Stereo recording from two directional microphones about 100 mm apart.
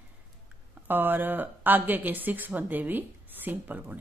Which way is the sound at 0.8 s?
20° right (ahead or behind).